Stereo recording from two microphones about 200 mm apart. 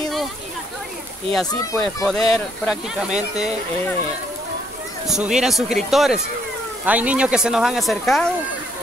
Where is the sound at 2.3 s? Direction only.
Centre (ahead or behind).